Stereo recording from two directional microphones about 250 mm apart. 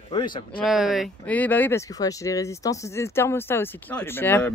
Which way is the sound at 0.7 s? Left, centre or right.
Centre.